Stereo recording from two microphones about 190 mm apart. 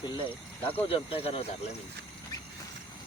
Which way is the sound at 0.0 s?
25° left (ahead or behind).